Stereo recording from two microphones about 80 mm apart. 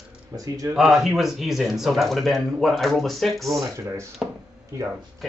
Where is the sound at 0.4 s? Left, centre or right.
Right.